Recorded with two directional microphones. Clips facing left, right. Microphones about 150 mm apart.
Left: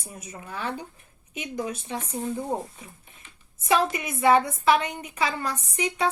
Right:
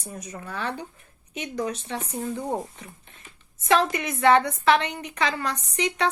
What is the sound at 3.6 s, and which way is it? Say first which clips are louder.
A woman's voice: right 2 dB; 10° left (ahead or behind).